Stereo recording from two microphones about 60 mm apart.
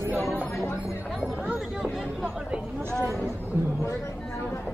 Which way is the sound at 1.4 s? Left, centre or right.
Centre.